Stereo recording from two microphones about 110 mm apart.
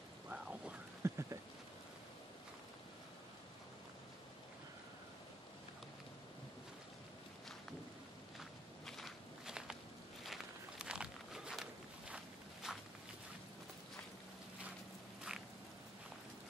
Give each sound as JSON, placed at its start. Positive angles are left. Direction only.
{"t": 0.3, "sound": "rain", "side_deg": -10}
{"t": 1.0, "sound": "a sound", "side_deg": -25}
{"t": 8.4, "sound": "walk", "side_deg": 0}